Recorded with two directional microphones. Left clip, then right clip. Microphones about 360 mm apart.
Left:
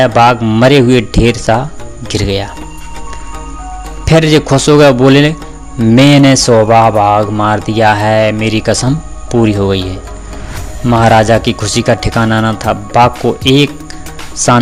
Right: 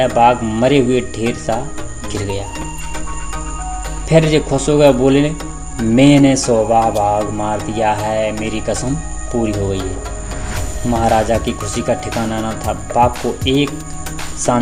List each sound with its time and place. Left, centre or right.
0.0 s music: left
4.0 s music: left
10.8 s music: left
14.3 s speech: left